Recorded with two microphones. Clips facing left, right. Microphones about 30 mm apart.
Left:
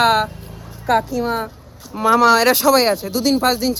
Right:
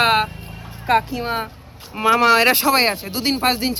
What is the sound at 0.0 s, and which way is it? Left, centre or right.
Speech, right.